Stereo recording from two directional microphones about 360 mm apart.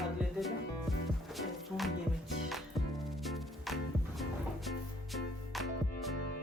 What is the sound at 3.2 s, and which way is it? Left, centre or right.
Music, centre.